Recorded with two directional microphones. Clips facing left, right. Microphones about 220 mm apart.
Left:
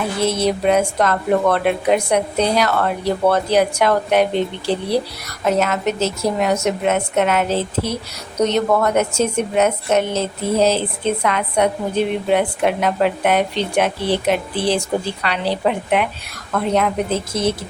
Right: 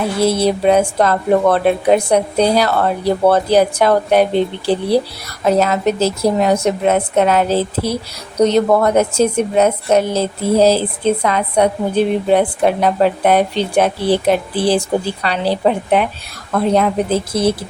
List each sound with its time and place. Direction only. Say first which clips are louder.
0.2 s a woman's voice: right 4 dB; 30° right (ahead or behind)
5.5 s a woman's voice: right 4 dB; 35° right (ahead or behind)